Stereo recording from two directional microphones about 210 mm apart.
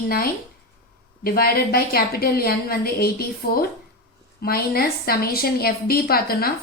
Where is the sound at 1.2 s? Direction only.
45° left (ahead or behind).